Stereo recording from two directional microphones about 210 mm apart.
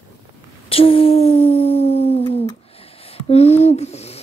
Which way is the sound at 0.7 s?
25° left (ahead or behind).